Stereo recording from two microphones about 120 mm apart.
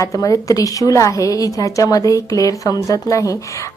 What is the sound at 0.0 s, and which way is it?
A woman's voice, 30° left (ahead or behind).